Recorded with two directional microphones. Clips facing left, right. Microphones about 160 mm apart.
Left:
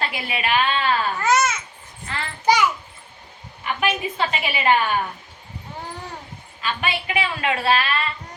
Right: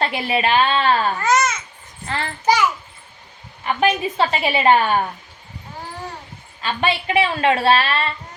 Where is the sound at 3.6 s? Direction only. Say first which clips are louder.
Right 5 dB; 35° right (ahead or behind).